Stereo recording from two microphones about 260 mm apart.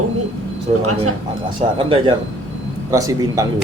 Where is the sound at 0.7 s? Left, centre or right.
Right.